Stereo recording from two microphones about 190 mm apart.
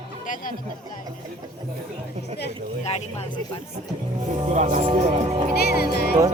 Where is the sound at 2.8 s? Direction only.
35° left (ahead or behind).